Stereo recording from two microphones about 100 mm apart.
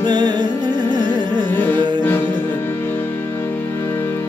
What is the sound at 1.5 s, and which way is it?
Music, 20° left (ahead or behind).